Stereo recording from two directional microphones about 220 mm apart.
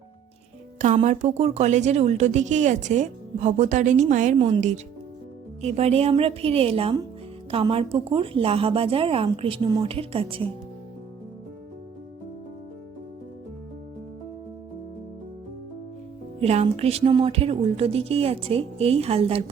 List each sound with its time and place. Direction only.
0.8 s a woman's voice: 35° right (ahead or behind)
4.4 s speech: 25° right (ahead or behind)
16.4 s speech: 30° right (ahead or behind)